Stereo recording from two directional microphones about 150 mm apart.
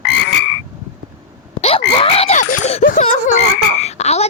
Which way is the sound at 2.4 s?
55° left (ahead or behind).